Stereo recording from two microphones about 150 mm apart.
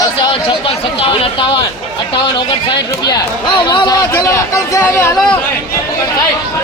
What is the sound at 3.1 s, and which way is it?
Speech, 30° left (ahead or behind).